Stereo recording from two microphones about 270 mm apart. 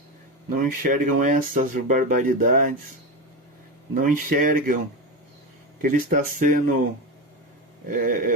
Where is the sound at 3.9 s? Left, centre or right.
Right.